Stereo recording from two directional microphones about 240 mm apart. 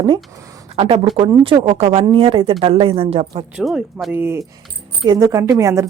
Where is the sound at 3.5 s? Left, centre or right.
Centre.